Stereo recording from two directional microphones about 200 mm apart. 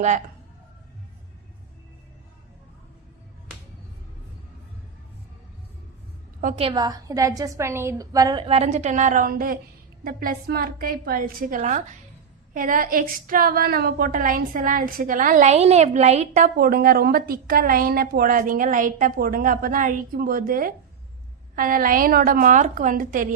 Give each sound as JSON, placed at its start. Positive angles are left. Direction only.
{"t": 6.6, "sound": "a woman's voice", "side_deg": -25}